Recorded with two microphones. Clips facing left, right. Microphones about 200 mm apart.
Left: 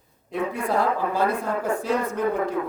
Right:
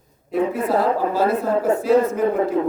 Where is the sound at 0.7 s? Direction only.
30° right (ahead or behind).